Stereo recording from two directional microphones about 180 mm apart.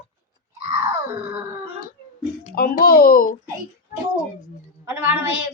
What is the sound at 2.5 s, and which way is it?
Speech, 55° left (ahead or behind).